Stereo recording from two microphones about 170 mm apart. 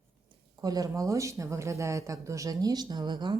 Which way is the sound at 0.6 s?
20° right (ahead or behind).